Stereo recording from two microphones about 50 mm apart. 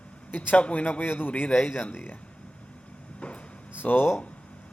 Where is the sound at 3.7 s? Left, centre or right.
Left.